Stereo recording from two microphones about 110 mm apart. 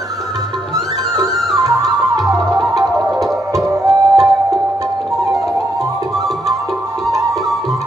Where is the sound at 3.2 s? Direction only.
30° right (ahead or behind).